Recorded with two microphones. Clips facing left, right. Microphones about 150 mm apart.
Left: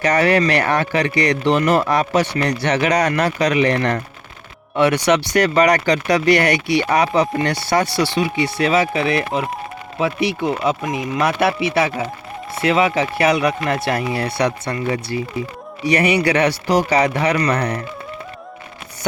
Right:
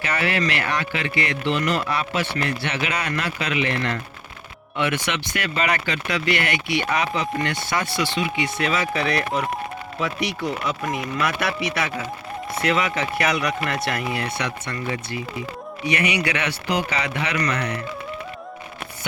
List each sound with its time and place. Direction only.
0.0 s speech: 40° left (ahead or behind)